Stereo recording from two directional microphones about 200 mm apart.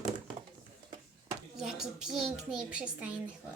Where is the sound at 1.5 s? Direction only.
5° right (ahead or behind).